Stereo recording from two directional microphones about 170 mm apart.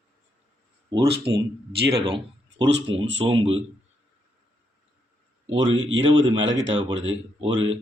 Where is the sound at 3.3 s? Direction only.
30° right (ahead or behind).